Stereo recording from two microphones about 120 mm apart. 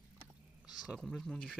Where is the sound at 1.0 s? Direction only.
5° left (ahead or behind).